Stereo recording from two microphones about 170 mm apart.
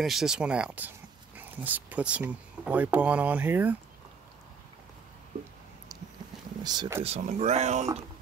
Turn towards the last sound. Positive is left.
turn(degrees=-45)  # may be behind; listen again after turning